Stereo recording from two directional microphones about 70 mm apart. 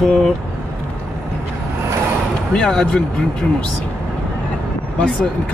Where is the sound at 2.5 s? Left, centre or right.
Centre.